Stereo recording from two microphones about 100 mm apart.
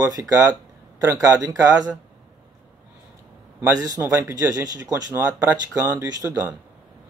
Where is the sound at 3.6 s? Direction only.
35° right (ahead or behind).